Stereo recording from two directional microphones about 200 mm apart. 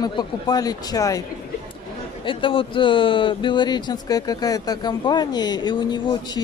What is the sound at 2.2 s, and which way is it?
Speech, 25° left (ahead or behind).